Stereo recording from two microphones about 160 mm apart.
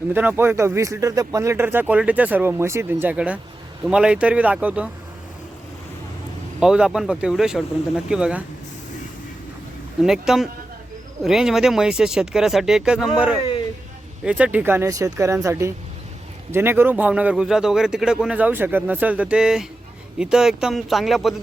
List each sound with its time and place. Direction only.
0.1 s speech: 15° right (ahead or behind)
6.6 s speech: 5° right (ahead or behind)
10.0 s speech: 5° right (ahead or behind)